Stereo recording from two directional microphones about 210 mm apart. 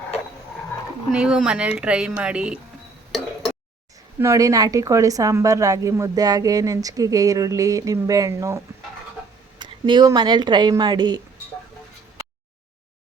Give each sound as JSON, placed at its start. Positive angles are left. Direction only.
{"t": 1.1, "sound": "speech", "side_deg": -5}
{"t": 4.2, "sound": "a woman's voice", "side_deg": -15}